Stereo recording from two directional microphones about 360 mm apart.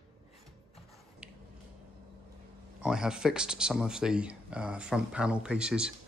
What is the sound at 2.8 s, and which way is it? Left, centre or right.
Speech, centre.